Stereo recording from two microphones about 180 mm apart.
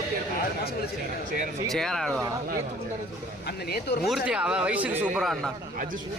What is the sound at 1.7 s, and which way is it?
Speech, centre (ahead or behind).